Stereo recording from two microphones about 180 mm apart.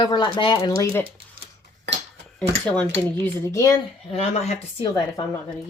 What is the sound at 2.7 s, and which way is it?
Speech, 10° left (ahead or behind).